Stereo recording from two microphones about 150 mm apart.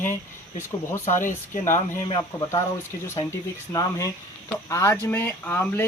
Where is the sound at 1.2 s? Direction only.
60° left (ahead or behind).